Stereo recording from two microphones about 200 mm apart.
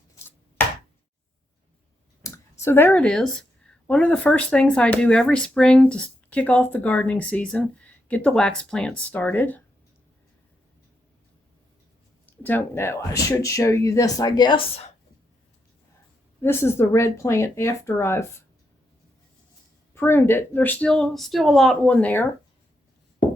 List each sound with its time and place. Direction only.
2.2 s a sound: 15° left (ahead or behind)
3.8 s speech: 5° left (ahead or behind)
12.2 s speech: 10° left (ahead or behind); by 14.9 s 30° left (ahead or behind)
16.4 s speech: 10° left (ahead or behind)
19.9 s speech: 10° left (ahead or behind)